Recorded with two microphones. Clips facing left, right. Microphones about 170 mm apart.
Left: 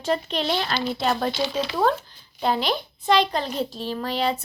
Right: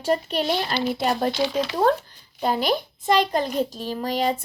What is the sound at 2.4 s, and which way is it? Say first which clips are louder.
A child's voice: right 1 dB; 45° right (ahead or behind).